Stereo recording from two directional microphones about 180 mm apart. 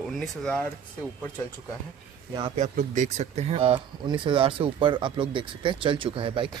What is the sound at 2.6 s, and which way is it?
Speech, 45° right (ahead or behind).